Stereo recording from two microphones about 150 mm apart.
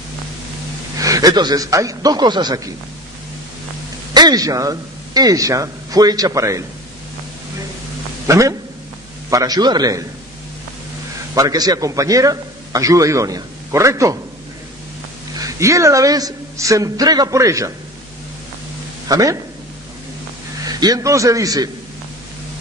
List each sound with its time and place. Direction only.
0.9 s a man's voice: 25° right (ahead or behind)
4.1 s a man's voice: 25° right (ahead or behind)
8.3 s a man's voice: 20° right (ahead or behind)
11.3 s a man's voice: 25° right (ahead or behind)
15.4 s a man's voice: 20° right (ahead or behind)
19.0 s speech: 25° right (ahead or behind)
20.7 s a man's voice: 25° right (ahead or behind)